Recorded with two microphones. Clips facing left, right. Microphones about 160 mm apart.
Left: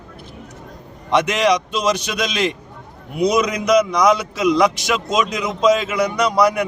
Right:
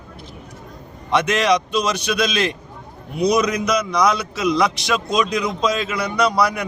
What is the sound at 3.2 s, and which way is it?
Speech, 90° left.